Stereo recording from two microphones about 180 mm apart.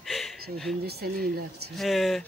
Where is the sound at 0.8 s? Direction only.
60° right (ahead or behind).